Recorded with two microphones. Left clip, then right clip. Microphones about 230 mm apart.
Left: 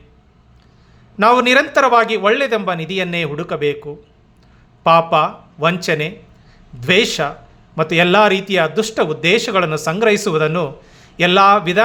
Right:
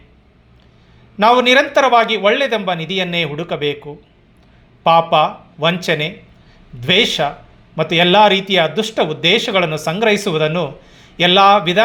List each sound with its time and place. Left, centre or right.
1.1 s a man's voice: centre